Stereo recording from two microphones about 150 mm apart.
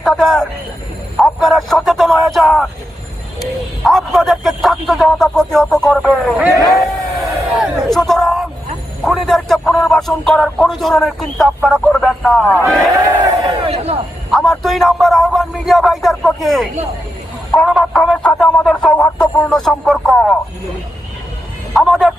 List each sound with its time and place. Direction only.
0.0 s speech: 5° left (ahead or behind)
3.8 s speech: centre (ahead or behind)
6.7 s crowd: centre (ahead or behind)
9.0 s speech: centre (ahead or behind)
13.7 s speech: 40° right (ahead or behind)
14.3 s speech: centre (ahead or behind)
21.7 s speech: centre (ahead or behind)